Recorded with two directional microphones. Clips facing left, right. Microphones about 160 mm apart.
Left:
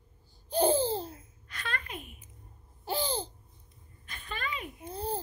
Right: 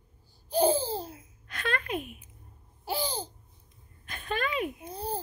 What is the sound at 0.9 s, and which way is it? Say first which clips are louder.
Baby laughter: even; 10° right (ahead or behind).